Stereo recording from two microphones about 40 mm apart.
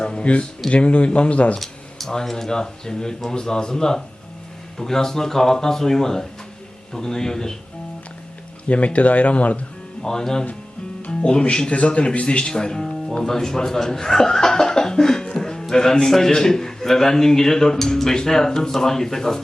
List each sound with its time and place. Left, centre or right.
0.0 s a sound: left
0.7 s speech: left
1.5 s a sound: centre
2.3 s a man's voice: centre
8.6 s speech: left
10.0 s a man's voice: centre
11.7 s a man's voice: left; by 15.3 s centre
15.3 s music: centre
15.6 s a man's voice: centre